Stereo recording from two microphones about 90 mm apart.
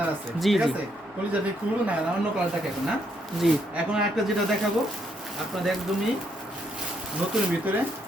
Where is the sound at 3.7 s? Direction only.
10° right (ahead or behind).